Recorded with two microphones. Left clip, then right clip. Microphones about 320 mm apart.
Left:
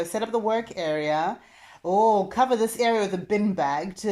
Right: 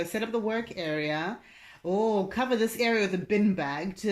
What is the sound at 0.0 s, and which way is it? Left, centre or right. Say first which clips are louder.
Speech: left 4 dB; centre.